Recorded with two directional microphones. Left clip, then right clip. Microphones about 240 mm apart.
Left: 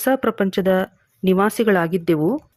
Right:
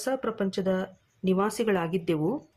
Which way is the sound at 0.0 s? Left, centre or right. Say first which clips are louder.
Left 10 dB; left.